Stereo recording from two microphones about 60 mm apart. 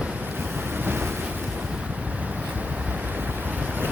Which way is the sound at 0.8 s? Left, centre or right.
Right.